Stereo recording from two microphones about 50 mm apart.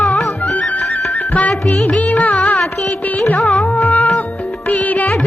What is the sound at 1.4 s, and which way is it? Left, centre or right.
Music, left.